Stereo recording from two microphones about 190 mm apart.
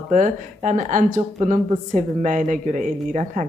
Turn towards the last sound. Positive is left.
turn(degrees=-40)  # may be behind; listen again after turning